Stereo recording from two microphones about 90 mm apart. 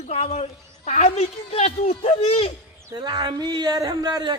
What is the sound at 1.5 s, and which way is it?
A man's voice, 90° left.